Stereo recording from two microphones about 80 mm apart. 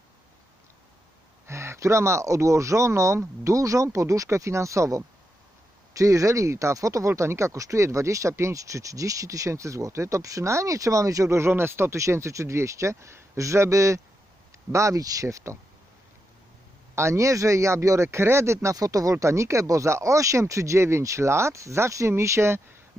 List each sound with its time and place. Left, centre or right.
1.5 s speech: right
16.9 s speech: right